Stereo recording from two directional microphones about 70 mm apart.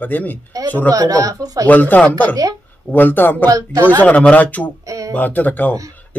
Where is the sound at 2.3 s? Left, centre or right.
Right.